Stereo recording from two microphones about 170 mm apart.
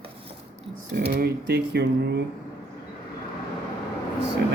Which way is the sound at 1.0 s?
65° right (ahead or behind).